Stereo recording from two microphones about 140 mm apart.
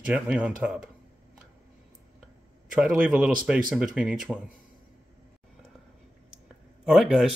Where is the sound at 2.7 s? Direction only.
5° right (ahead or behind).